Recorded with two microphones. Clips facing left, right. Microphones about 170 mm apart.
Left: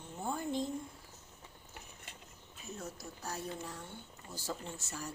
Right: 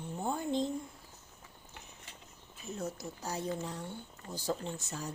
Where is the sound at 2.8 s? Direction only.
20° right (ahead or behind).